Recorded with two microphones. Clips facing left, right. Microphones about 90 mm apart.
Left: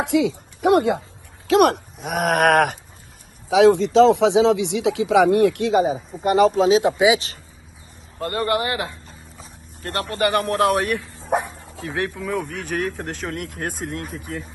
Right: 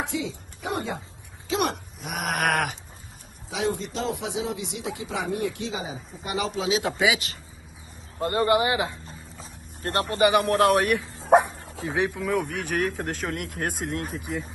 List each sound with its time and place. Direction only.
0.0 s speech: 70° left (ahead or behind)
2.0 s a sound: 45° left (ahead or behind)
3.4 s speech: 90° left; by 6.8 s 40° left (ahead or behind)
6.8 s speech: 20° left (ahead or behind)
8.2 s speech: 20° right (ahead or behind)
9.0 s vehicle: 35° right (ahead or behind)
10.1 s a man's voice: 15° right (ahead or behind)
10.4 s speech: centre (ahead or behind)
11.9 s a man's voice: 15° right (ahead or behind)